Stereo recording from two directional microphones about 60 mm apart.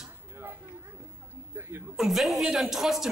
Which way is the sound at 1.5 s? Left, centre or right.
Right.